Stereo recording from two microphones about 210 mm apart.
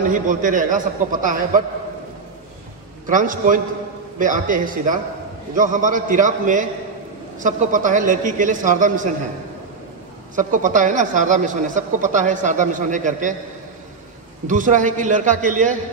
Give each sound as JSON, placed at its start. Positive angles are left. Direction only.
{"t": 0.1, "sound": "a man's voice", "side_deg": -40}
{"t": 3.1, "sound": "a man's voice", "side_deg": -40}
{"t": 10.3, "sound": "a man's voice", "side_deg": -40}
{"t": 14.5, "sound": "a man's voice", "side_deg": -35}